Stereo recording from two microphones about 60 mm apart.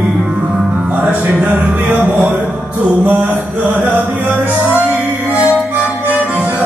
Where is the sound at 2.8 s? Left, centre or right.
Right.